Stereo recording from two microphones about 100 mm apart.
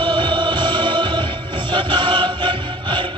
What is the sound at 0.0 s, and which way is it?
Music, 50° right (ahead or behind).